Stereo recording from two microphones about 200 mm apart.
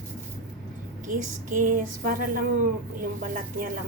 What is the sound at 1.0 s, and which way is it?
A woman's voice, 40° right (ahead or behind).